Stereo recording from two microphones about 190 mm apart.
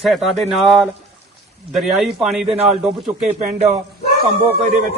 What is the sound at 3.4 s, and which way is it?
Speech, 40° right (ahead or behind).